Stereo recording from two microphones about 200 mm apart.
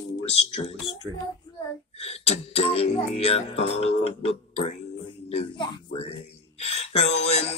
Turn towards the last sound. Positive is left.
turn(degrees=35)  # may be behind; listen again after turning